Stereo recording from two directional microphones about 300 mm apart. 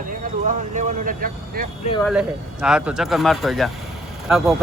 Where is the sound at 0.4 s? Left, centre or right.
Right.